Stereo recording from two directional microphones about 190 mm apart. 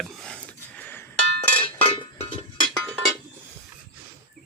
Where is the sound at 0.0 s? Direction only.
Centre (ahead or behind).